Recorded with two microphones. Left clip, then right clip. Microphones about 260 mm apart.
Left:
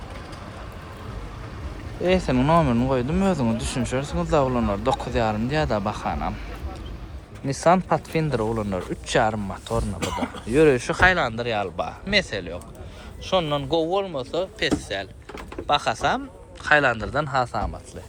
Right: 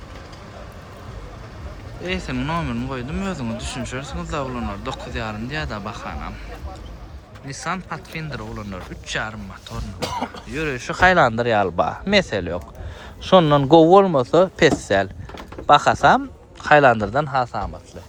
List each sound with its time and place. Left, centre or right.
2.0 s speech: centre
7.6 s speech: centre
11.2 s speech: right